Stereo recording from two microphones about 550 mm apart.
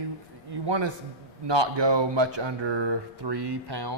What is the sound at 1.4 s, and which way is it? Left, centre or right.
Speech, right.